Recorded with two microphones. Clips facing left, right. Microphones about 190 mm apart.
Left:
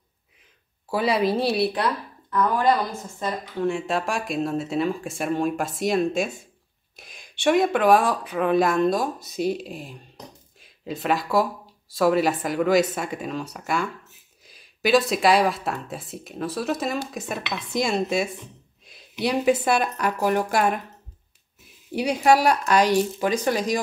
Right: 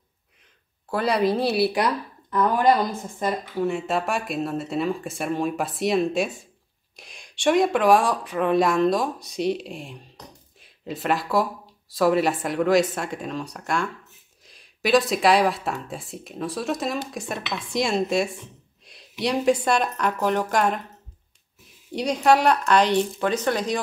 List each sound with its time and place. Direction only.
0.8 s speech: centre (ahead or behind)
2.3 s a woman's voice: 20° right (ahead or behind)
3.6 s speech: centre (ahead or behind)
21.9 s speech: 10° left (ahead or behind)